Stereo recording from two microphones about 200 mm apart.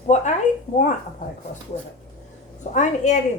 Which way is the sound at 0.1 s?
35° left (ahead or behind).